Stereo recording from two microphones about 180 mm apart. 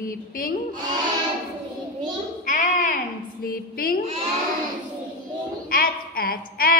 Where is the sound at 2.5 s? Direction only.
45° left (ahead or behind).